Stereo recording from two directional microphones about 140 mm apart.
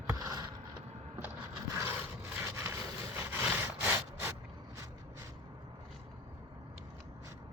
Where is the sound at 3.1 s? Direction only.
15° right (ahead or behind).